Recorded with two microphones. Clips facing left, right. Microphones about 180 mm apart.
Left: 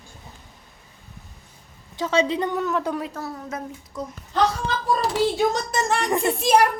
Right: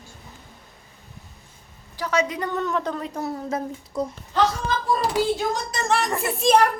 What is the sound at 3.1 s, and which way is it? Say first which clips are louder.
Speech: right 4 dB; 25° right (ahead or behind).